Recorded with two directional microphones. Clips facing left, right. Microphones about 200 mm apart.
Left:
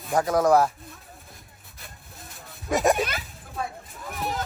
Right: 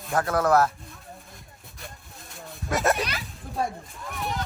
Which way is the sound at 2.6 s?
15° left (ahead or behind).